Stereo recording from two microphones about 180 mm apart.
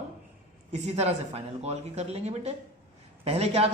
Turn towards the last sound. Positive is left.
turn(degrees=-35)  # may be behind; listen again after turning